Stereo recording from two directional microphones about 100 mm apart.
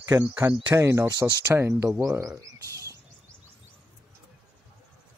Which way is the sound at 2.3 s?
30° right (ahead or behind).